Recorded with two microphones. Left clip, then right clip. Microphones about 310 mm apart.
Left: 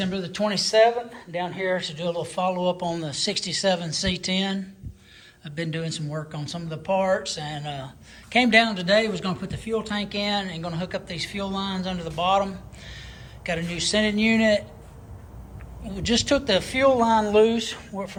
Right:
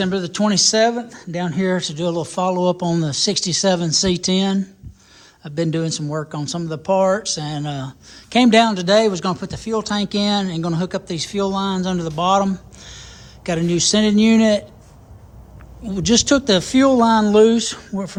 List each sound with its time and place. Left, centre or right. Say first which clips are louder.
0.2 s speech: right 5 dB; centre
1.1 s speech: right 4 dB; right
1.8 s speech: right 6 dB; centre
16.0 s speech: right 6 dB; centre